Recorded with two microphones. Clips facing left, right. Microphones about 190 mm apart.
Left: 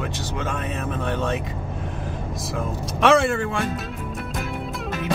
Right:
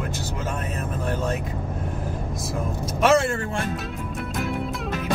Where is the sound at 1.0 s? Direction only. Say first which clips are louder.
Left 1 dB; 5° right (ahead or behind).